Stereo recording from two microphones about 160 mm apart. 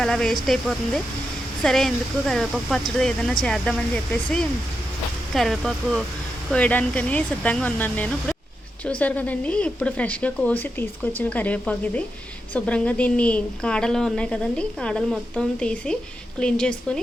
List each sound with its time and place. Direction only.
0.0 s a woman's voice: 5° left (ahead or behind)